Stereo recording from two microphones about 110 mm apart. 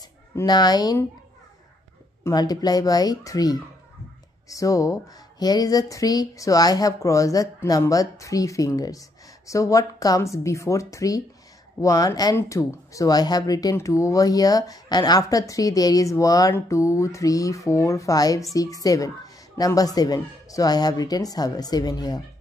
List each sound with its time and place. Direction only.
0.5 s speech: 40° left (ahead or behind)
2.3 s speech: 35° left (ahead or behind)